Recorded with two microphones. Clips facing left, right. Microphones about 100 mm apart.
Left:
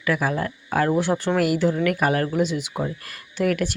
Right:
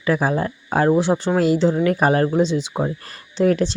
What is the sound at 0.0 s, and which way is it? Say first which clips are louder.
Speech: right 4 dB; 30° right (ahead or behind).